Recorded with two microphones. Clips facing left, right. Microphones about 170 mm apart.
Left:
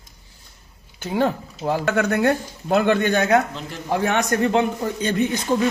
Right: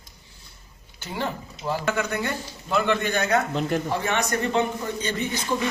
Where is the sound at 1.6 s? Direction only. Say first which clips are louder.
Left 5 dB; 60° left (ahead or behind).